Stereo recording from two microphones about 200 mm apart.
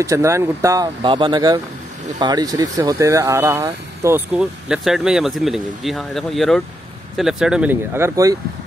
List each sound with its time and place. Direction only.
0.0 s speech: 15° right (ahead or behind)